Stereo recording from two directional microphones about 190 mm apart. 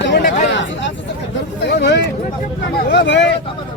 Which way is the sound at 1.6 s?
60° left (ahead or behind).